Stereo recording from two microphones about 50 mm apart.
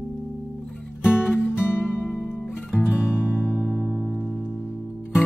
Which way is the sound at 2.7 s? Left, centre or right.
Centre.